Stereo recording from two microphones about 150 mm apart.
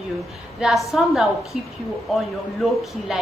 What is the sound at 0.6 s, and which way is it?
A woman's voice, centre (ahead or behind).